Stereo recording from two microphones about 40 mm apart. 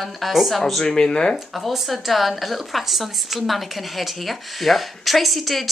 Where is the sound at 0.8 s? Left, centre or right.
Centre.